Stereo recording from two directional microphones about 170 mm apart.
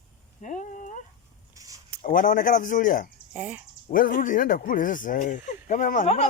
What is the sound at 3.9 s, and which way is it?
Speech, 55° left (ahead or behind).